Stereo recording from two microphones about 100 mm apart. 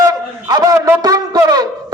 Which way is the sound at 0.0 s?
40° right (ahead or behind).